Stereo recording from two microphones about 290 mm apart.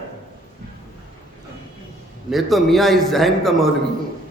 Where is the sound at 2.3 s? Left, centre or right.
Centre.